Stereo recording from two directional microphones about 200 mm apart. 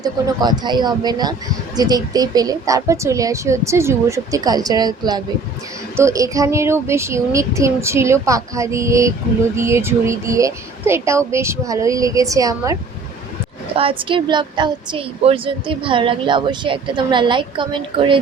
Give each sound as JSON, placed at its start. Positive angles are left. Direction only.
{"t": 0.0, "sound": "speech", "side_deg": -20}
{"t": 13.7, "sound": "speech", "side_deg": -25}